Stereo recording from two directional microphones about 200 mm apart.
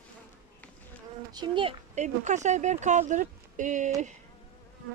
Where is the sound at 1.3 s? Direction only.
25° right (ahead or behind).